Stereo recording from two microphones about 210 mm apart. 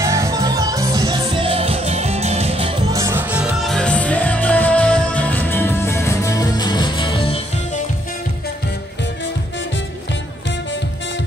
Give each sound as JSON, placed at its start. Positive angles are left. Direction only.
{"t": 0.0, "sound": "music", "side_deg": -15}
{"t": 2.9, "sound": "music", "side_deg": -15}